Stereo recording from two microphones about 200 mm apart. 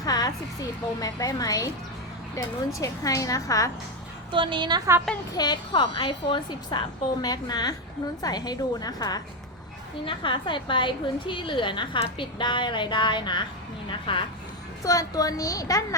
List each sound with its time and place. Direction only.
0.0 s a sound: 20° left (ahead or behind)
0.9 s a woman's voice: 20° left (ahead or behind)
4.3 s a woman's voice: 25° right (ahead or behind)
5.3 s a woman's voice: 20° left (ahead or behind)